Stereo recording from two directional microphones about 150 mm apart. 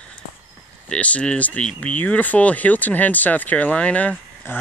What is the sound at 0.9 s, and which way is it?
Speech, 10° left (ahead or behind).